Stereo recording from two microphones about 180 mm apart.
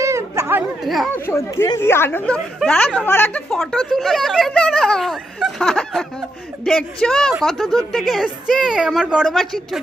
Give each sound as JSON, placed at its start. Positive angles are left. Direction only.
{"t": 0.0, "sound": "a sound", "side_deg": -15}
{"t": 0.9, "sound": "speech", "side_deg": 0}
{"t": 1.1, "sound": "speech", "side_deg": 15}